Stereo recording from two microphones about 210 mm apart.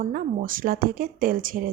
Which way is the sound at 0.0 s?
40° right (ahead or behind).